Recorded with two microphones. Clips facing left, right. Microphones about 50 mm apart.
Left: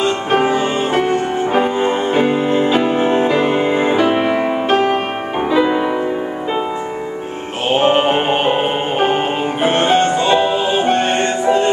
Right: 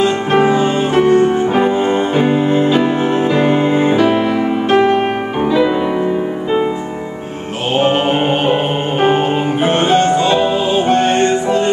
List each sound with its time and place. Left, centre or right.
0.0 s music: centre
4.1 s music: left
5.4 s music: centre
7.7 s music: centre